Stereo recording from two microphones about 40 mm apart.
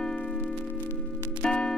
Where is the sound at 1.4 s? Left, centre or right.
Left.